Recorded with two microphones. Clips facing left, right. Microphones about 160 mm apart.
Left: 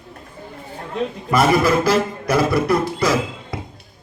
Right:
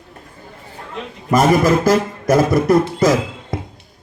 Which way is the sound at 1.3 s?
45° right (ahead or behind).